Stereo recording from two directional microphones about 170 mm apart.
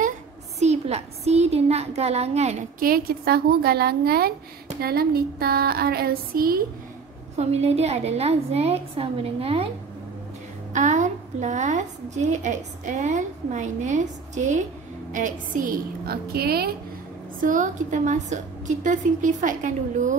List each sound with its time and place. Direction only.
0.6 s a woman's voice: 40° right (ahead or behind)
2.8 s a sound: 60° right (ahead or behind)
7.3 s a woman's voice: 40° right (ahead or behind)
10.7 s a woman's voice: 45° right (ahead or behind)
15.1 s a sound: 55° right (ahead or behind)
17.4 s a woman's voice: 50° right (ahead or behind)